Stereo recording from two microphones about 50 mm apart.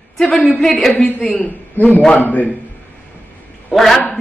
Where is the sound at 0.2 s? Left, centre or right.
Left.